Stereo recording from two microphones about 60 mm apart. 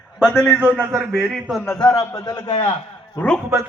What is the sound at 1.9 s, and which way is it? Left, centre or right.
Speech, left.